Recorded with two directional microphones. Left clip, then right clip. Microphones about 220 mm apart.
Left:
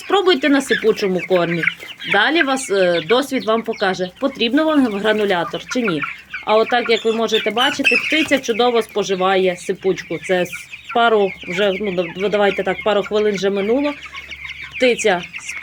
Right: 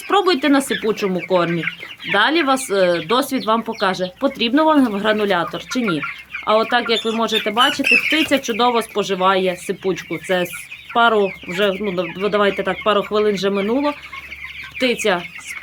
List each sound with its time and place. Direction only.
0.1 s speech: 5° right (ahead or behind)
1.5 s speech: 50° left (ahead or behind)
2.1 s speech: centre (ahead or behind)